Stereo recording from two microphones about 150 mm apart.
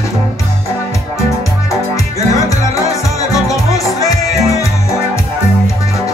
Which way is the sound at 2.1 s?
20° left (ahead or behind).